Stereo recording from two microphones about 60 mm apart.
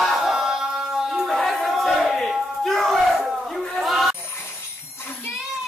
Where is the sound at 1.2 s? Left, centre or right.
Centre.